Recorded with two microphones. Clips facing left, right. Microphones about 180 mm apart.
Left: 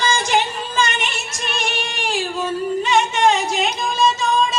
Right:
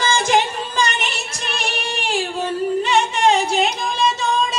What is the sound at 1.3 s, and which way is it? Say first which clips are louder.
Music: left 1 dB; 35° right (ahead or behind).